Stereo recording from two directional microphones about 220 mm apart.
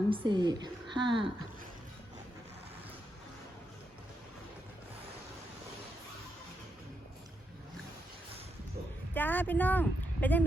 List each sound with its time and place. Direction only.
0.1 s a woman's voice: 20° right (ahead or behind)
9.1 s speech: 10° left (ahead or behind)